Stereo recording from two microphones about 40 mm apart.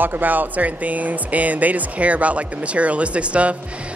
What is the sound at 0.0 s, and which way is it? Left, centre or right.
Speech, right.